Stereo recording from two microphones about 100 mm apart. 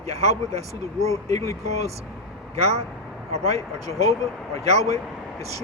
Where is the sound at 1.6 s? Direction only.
90° right.